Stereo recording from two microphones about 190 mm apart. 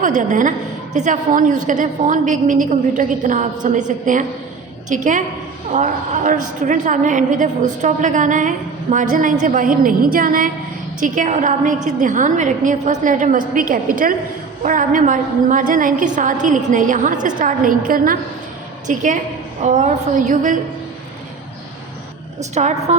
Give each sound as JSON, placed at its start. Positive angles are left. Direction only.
{"t": 0.0, "sound": "a woman's voice", "side_deg": -40}
{"t": 22.4, "sound": "a woman's voice", "side_deg": -35}